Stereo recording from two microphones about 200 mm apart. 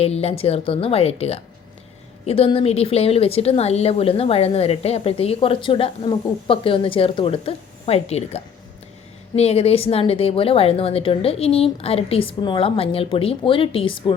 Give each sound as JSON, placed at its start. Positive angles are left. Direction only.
{"t": 0.0, "sound": "a woman's voice", "side_deg": 30}